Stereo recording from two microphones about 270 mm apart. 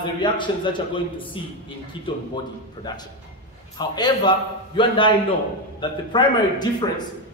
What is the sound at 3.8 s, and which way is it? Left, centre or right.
A man's voice, centre.